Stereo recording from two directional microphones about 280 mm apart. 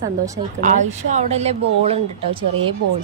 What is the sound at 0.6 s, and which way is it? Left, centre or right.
A woman's voice, right.